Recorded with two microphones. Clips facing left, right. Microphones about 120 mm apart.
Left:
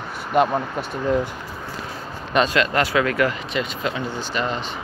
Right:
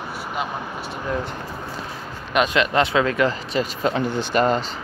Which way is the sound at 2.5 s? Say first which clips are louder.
Right 1 dB; 20° right (ahead or behind).